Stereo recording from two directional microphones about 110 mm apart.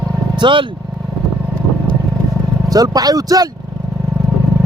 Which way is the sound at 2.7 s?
35° right (ahead or behind).